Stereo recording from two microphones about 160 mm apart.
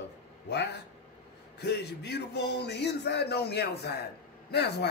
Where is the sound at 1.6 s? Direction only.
90° left.